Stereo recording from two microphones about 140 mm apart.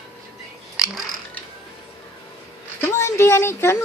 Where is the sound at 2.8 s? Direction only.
20° left (ahead or behind).